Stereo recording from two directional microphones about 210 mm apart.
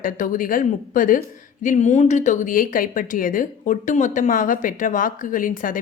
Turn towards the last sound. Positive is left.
turn(degrees=40)  # may be behind; listen again after turning